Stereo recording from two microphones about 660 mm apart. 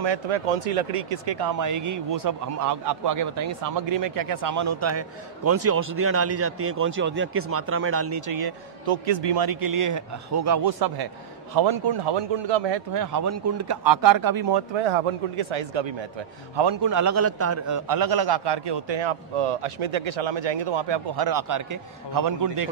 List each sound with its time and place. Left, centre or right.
0.0 s speech: right
0.6 s a man's voice: right
3.9 s a man's voice: right
14.8 s speech: right
16.5 s a man's voice: right